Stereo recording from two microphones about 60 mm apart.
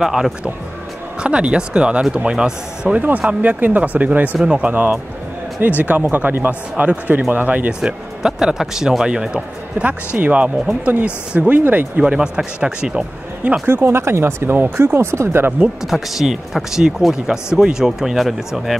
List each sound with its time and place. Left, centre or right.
0.0 s speech: centre
1.2 s speech: centre
3.0 s speech: right
7.8 s speech: centre
9.8 s speech: right
12.0 s speech: centre
13.7 s speech: right
15.8 s speech: centre